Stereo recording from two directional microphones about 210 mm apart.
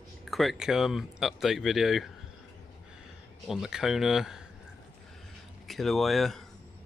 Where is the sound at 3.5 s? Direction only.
Centre (ahead or behind).